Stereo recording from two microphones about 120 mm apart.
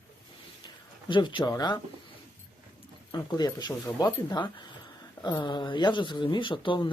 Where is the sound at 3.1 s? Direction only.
35° left (ahead or behind).